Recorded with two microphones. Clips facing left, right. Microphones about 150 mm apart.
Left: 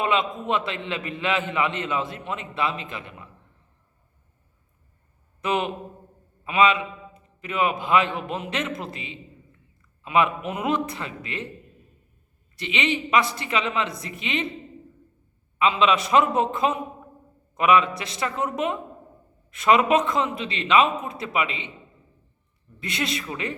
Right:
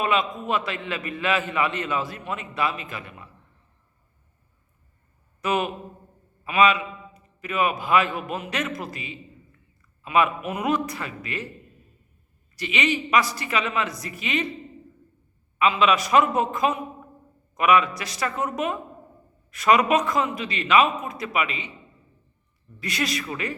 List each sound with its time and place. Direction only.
0.0 s a man's voice: 25° left (ahead or behind)
5.4 s a man's voice: 25° left (ahead or behind)
12.5 s a man's voice: 25° left (ahead or behind)
15.5 s a man's voice: 25° left (ahead or behind)
22.8 s a man's voice: 25° left (ahead or behind)